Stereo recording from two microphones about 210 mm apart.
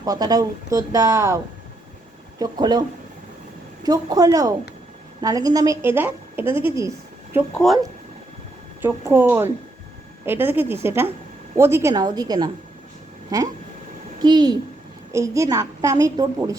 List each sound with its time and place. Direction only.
0.0 s a woman's voice: 20° right (ahead or behind)
2.4 s a woman's voice: 20° right (ahead or behind)
3.8 s a woman's voice: 20° right (ahead or behind)
7.3 s speech: centre (ahead or behind)
8.8 s a woman's voice: 10° right (ahead or behind)